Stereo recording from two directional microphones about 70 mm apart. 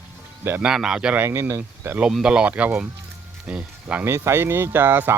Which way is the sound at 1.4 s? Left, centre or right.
Right.